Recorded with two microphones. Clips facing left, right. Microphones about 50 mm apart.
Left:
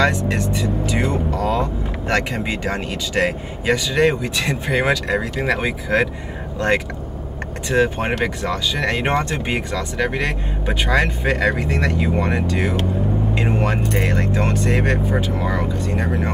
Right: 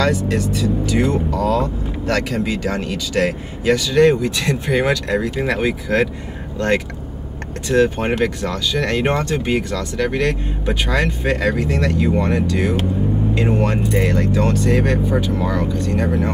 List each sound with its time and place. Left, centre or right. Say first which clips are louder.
0.6 s speech: right 3 dB; left
7.6 s speech: right 2 dB; centre
14.1 s speech: right 3 dB; left